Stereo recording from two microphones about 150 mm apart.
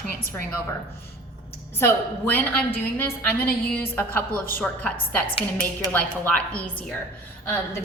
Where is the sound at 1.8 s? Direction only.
15° left (ahead or behind).